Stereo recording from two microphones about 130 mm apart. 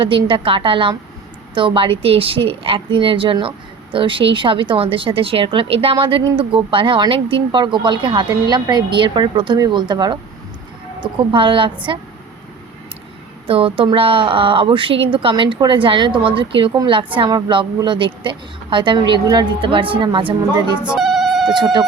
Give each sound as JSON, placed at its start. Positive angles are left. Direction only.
{"t": 0.0, "sound": "a woman's voice", "side_deg": -40}
{"t": 13.5, "sound": "a woman's voice", "side_deg": -45}
{"t": 20.8, "sound": "telephone bell ringing", "side_deg": -5}
{"t": 21.5, "sound": "speech", "side_deg": -35}